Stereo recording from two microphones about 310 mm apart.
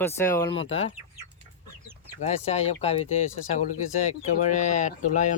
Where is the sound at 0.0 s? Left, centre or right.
Centre.